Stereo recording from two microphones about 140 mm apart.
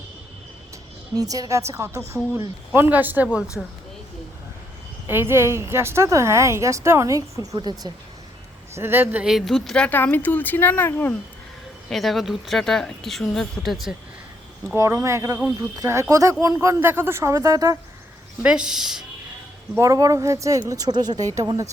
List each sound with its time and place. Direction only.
1.1 s a woman's voice: 25° right (ahead or behind)
3.6 s speech: centre (ahead or behind)
5.0 s a woman's voice: 15° right (ahead or behind)
8.7 s a man's voice: 15° right (ahead or behind)
9.2 s speech: centre (ahead or behind); by 11.1 s 15° left (ahead or behind)
11.9 s speech: centre (ahead or behind)
14.8 s a woman's voice: 20° right (ahead or behind)
18.4 s speech: 5° right (ahead or behind)
19.7 s a woman's voice: 20° right (ahead or behind)